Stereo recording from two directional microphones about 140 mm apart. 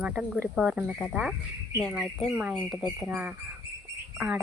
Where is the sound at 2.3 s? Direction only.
10° right (ahead or behind).